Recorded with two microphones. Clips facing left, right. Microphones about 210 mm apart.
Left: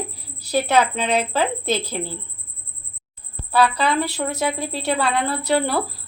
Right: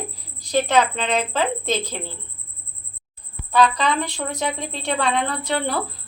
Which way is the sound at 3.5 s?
5° left (ahead or behind).